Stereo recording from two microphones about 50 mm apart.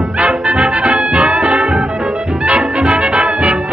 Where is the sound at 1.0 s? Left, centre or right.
Right.